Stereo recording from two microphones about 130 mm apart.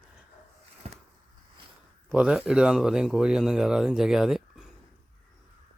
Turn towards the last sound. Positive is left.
turn(degrees=-5)  # may be behind; listen again after turning